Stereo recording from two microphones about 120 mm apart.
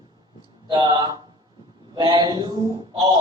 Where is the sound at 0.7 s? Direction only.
35° right (ahead or behind).